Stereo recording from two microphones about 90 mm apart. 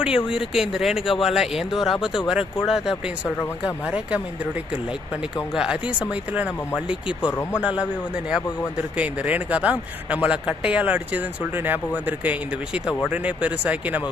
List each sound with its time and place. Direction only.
0.3 s speech: 5° right (ahead or behind)
5.5 s speech: 10° right (ahead or behind)
7.3 s speech: 30° left (ahead or behind)
7.6 s speech: 10° right (ahead or behind)
9.0 s speech: 15° right (ahead or behind)